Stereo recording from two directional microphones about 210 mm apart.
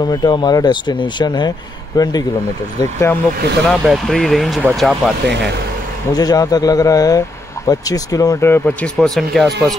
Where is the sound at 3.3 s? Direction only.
50° right (ahead or behind).